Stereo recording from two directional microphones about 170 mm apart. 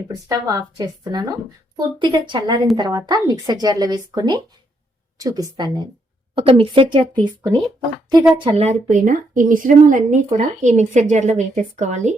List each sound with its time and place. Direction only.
0.1 s a woman's voice: 20° right (ahead or behind)
8.4 s a woman's voice: 35° right (ahead or behind)